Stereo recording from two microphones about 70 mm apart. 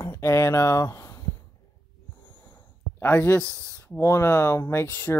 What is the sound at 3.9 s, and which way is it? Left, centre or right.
Speech, left.